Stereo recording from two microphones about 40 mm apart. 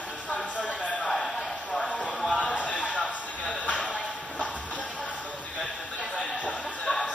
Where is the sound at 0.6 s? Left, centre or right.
Left.